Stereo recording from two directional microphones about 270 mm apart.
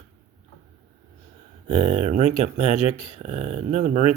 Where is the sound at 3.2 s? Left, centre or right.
Right.